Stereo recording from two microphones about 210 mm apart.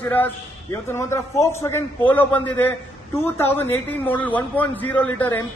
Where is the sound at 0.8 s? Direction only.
10° left (ahead or behind).